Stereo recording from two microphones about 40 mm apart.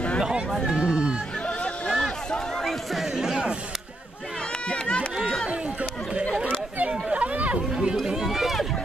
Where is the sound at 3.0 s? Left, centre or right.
Centre.